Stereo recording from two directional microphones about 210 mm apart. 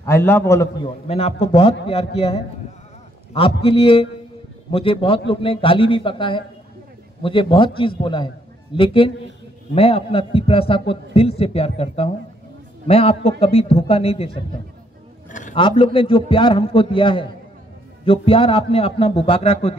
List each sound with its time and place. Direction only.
0.0 s a man's voice: 10° left (ahead or behind)
0.8 s a man's voice: 30° left (ahead or behind)
3.6 s a man's voice: 25° left (ahead or behind)
15.5 s a man's voice: 25° left (ahead or behind)